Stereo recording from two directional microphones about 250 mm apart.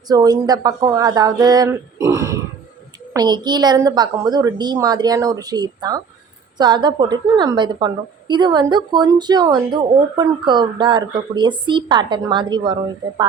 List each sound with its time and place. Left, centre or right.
0.1 s a woman's voice: centre